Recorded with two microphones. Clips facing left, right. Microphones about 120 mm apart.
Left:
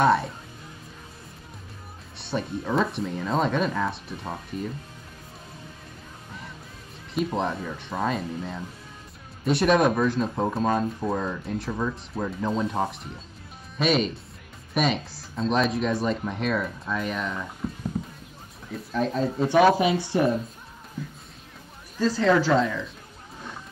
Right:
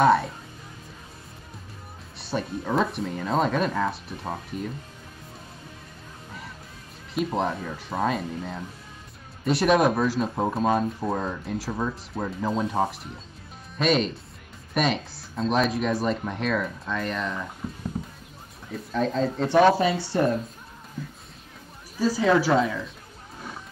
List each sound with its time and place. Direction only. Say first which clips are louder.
0.0 s speech: right 2 dB; centre (ahead or behind)
2.1 s speech: even; centre (ahead or behind)
7.2 s speech: even; centre (ahead or behind)
18.7 s speech: even; centre (ahead or behind)
21.0 s music: left 1 dB; centre (ahead or behind)
21.9 s speech: even; 10° right (ahead or behind)